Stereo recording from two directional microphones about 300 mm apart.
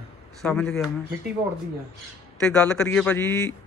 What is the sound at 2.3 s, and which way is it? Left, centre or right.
Speech, centre.